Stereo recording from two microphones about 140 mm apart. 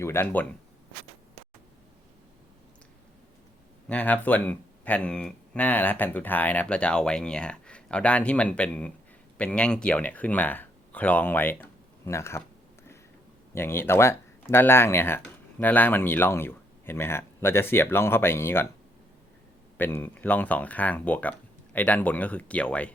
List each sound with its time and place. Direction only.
0.0 s speech: 20° left (ahead or behind)
3.8 s speech: 10° left (ahead or behind)
13.5 s speech: 15° left (ahead or behind)
19.7 s speech: 15° left (ahead or behind)